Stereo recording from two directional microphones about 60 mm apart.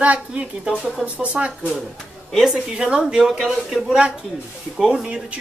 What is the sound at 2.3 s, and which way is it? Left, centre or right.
Speech, centre.